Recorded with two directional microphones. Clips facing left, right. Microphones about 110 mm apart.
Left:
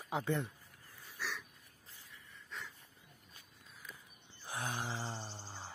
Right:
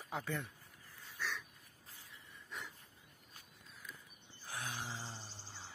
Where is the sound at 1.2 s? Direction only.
5° left (ahead or behind).